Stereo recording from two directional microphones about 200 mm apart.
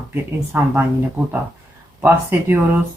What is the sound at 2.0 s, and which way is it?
Speech, 10° right (ahead or behind).